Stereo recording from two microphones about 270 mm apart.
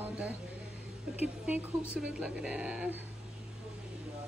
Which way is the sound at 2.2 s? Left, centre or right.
Centre.